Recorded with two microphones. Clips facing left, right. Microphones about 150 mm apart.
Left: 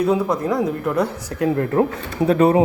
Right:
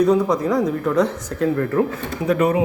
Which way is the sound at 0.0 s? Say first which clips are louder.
Right 2 dB; 5° left (ahead or behind).